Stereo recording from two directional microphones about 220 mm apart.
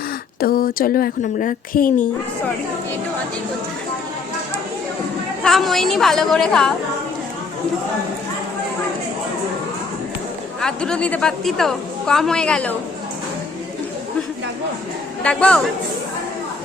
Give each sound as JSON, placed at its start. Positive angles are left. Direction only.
{"t": 0.3, "sound": "speech", "side_deg": 40}
{"t": 5.4, "sound": "a woman's voice", "side_deg": 0}
{"t": 10.6, "sound": "a woman's voice", "side_deg": 5}
{"t": 15.2, "sound": "a woman's voice", "side_deg": 5}